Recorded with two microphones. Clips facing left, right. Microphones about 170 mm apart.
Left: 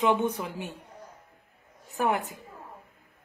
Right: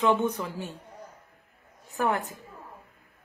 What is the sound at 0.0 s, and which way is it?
Speech, 15° left (ahead or behind).